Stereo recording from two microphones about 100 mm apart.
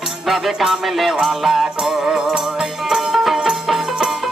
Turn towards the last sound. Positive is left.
turn(degrees=-5)  # may be behind; listen again after turning